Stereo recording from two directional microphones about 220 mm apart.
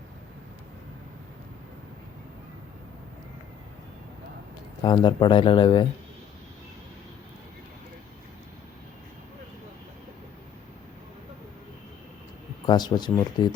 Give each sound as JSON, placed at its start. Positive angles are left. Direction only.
{"t": 4.8, "sound": "speech", "side_deg": 20}
{"t": 12.6, "sound": "speech", "side_deg": 20}